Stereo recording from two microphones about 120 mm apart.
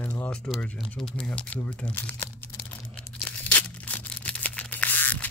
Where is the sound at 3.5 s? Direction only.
15° left (ahead or behind).